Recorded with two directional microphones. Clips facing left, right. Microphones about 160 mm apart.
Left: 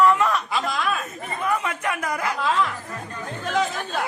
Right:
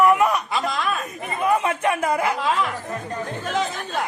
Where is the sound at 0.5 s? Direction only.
Centre (ahead or behind).